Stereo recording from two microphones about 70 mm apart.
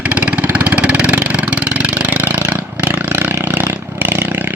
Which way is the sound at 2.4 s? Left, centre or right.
Right.